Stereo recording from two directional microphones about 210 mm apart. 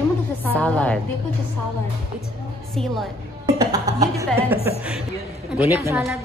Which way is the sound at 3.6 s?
15° right (ahead or behind).